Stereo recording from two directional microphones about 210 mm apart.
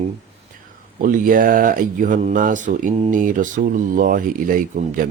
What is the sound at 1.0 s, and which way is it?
Speech, 40° right (ahead or behind).